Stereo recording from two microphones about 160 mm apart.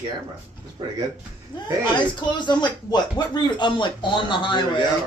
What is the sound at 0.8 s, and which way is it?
Speech, 35° right (ahead or behind).